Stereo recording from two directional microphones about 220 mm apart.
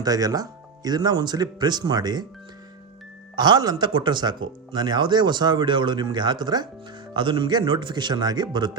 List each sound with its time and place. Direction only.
0.0 s speech: 15° right (ahead or behind)
3.3 s speech: 20° right (ahead or behind)